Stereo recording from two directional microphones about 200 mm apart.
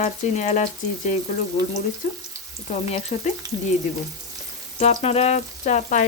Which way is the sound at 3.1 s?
35° left (ahead or behind).